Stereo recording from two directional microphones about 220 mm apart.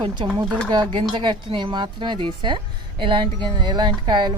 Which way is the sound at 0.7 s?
20° right (ahead or behind).